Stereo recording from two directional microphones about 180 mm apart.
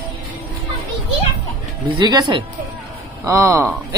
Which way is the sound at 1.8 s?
20° right (ahead or behind).